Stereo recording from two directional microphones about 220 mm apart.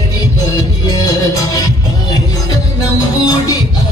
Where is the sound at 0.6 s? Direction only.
15° left (ahead or behind).